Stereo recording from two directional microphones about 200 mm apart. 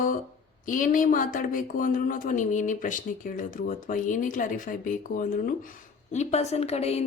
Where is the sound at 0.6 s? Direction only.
40° left (ahead or behind).